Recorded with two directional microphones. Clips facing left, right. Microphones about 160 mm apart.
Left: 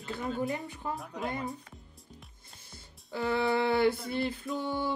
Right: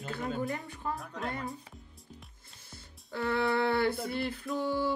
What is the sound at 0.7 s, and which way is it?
Speech, 20° left (ahead or behind).